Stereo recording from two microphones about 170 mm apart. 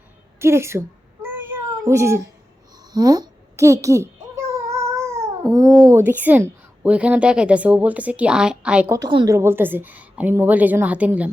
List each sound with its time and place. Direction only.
0.3 s cat: 15° right (ahead or behind)
2.9 s babbling: 25° right (ahead or behind)
5.5 s a child's voice: 20° right (ahead or behind)
6.0 s a woman's voice: 10° right (ahead or behind)
8.9 s a woman's voice: 25° right (ahead or behind); by 11.3 s 10° right (ahead or behind)